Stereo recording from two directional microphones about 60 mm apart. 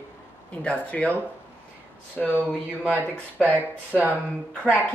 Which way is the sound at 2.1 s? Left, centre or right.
Left.